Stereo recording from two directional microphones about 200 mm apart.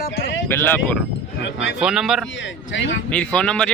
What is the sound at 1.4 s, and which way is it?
Speech, 65° left (ahead or behind).